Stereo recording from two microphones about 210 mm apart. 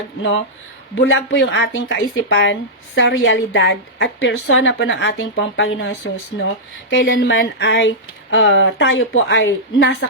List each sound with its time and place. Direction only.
0.2 s speech: 60° left (ahead or behind)